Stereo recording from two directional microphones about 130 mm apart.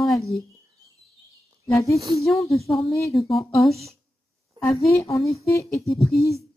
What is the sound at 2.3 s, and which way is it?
A woman's voice, centre (ahead or behind).